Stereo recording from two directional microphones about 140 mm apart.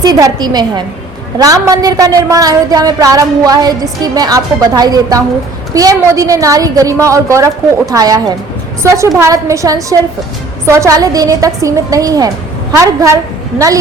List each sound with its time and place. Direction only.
0.0 s a woman's voice: 25° right (ahead or behind)